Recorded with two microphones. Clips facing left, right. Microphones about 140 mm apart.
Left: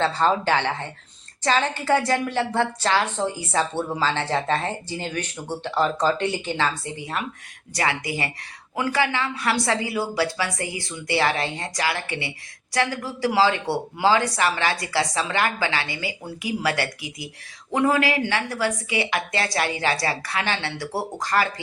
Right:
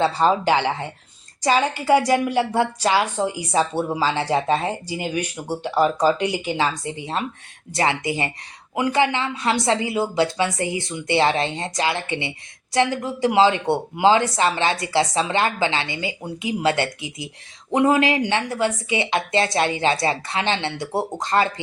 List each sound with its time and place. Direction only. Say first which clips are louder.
0.0 s a woman's voice: right 3 dB; 15° right (ahead or behind)